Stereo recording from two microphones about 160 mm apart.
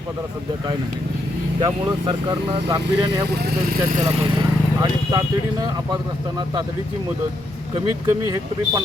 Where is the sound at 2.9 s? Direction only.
90° right.